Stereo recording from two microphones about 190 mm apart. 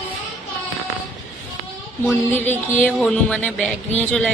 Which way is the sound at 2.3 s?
10° left (ahead or behind).